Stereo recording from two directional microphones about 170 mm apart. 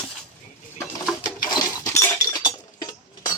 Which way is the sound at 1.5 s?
20° left (ahead or behind).